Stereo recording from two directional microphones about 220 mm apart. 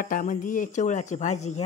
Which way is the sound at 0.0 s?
40° left (ahead or behind).